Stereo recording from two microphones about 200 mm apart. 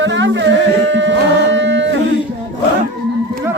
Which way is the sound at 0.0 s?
65° right (ahead or behind).